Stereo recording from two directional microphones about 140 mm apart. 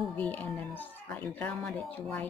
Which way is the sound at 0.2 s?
10° left (ahead or behind).